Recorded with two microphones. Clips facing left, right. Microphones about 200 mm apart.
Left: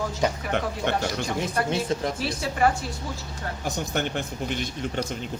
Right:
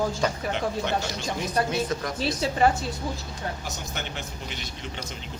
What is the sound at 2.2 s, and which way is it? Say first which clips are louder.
Speech: right 5 dB; 25° right (ahead or behind).